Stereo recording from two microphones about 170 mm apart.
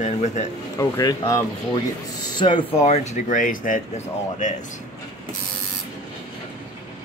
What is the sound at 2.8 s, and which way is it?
Speech, 45° left (ahead or behind).